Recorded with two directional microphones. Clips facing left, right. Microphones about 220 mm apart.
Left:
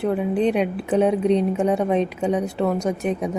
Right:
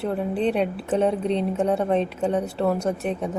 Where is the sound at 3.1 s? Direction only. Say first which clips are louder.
Left 3 dB; 10° left (ahead or behind).